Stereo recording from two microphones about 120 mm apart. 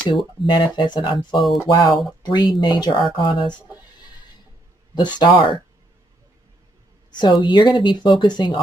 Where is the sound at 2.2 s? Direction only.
35° left (ahead or behind).